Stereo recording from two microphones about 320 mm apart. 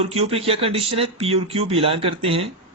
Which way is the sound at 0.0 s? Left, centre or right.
Centre.